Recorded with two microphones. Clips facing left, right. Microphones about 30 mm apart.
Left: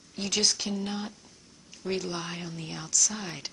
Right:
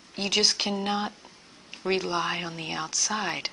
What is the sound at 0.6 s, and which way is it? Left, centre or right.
A woman's voice, right.